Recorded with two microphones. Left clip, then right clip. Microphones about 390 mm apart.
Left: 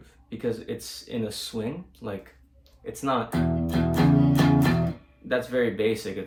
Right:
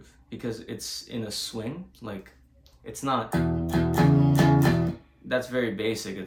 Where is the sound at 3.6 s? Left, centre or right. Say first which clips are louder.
Even; centre.